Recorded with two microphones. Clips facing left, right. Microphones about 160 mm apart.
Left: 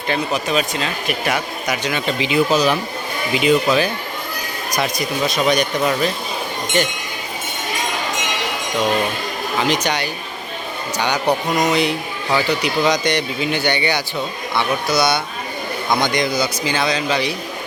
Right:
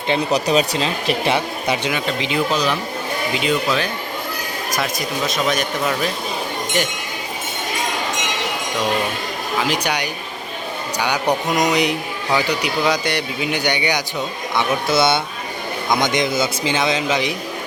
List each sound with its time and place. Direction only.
0.3 s speech: 35° right (ahead or behind)
1.9 s a man's voice: centre (ahead or behind)
9.6 s a man's voice: 10° right (ahead or behind)
14.8 s speech: 25° right (ahead or behind)